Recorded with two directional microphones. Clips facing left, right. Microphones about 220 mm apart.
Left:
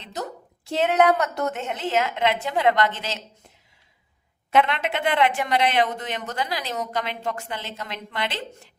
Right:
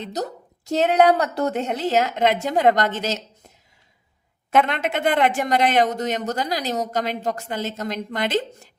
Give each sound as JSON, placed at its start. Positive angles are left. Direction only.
{"t": 0.0, "sound": "speech", "side_deg": -40}
{"t": 4.5, "sound": "a woman's voice", "side_deg": -45}